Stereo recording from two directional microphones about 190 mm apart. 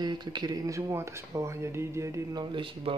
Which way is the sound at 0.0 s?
20° right (ahead or behind).